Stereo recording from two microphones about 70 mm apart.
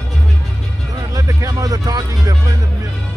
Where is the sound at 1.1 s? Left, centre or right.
Right.